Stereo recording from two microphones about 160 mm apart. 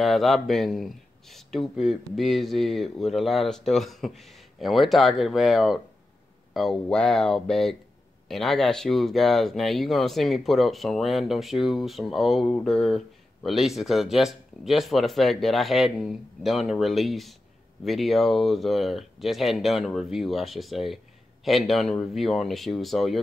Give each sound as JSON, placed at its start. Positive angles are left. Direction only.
{"t": 0.0, "sound": "speech", "side_deg": 0}